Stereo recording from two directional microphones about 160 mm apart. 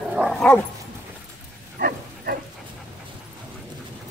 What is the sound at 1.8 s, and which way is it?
Bow-wow, 65° right (ahead or behind).